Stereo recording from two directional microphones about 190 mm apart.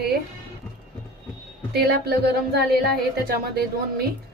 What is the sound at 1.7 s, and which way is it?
Speech, 55° right (ahead or behind).